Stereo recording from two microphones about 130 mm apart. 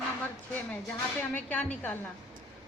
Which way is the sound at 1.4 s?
10° left (ahead or behind).